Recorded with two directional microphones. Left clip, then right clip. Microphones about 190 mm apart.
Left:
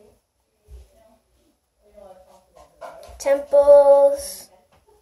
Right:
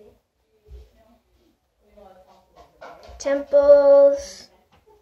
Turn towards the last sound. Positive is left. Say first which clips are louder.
# right 2 dB
turn(degrees=5)  # may be behind; listen again after turning